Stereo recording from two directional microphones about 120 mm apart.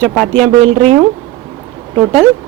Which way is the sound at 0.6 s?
55° right (ahead or behind).